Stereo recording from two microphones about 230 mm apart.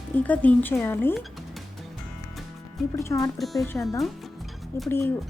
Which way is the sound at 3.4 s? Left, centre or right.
Centre.